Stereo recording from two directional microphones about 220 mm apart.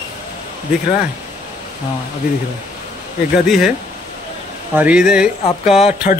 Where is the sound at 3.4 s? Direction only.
Centre (ahead or behind).